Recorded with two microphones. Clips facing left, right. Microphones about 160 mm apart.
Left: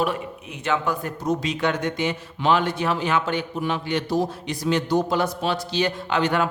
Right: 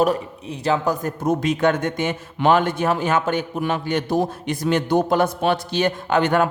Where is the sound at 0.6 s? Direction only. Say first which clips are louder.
Right 4 dB; 35° right (ahead or behind).